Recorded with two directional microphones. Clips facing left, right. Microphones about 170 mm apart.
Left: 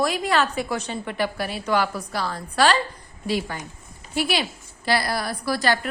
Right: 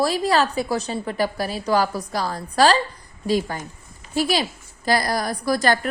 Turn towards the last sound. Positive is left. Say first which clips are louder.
# right 3 dB
turn(degrees=-45)  # may be behind; listen again after turning